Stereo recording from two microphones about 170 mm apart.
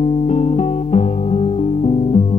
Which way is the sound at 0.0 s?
40° left (ahead or behind).